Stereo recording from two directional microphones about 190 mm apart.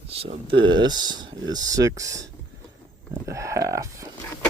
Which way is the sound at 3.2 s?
15° right (ahead or behind).